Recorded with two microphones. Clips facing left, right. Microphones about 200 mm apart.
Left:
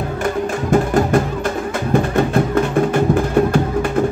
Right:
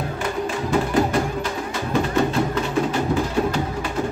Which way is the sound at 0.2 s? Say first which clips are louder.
Left 5 dB; 50° left (ahead or behind).